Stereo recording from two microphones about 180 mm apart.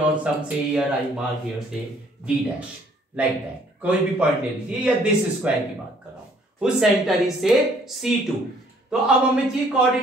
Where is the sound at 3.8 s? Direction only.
5° right (ahead or behind).